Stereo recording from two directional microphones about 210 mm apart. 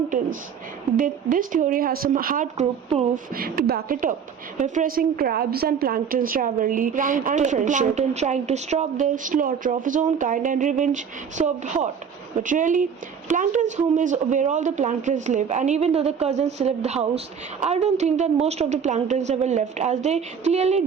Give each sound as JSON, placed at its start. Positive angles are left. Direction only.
{"t": 0.9, "sound": "speech", "side_deg": -40}